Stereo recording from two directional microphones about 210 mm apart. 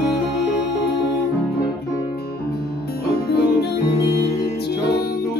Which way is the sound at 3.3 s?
50° left (ahead or behind).